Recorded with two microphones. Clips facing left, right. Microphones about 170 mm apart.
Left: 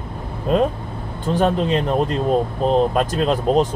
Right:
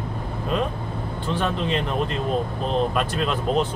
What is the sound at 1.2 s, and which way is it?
Speech, 45° left (ahead or behind).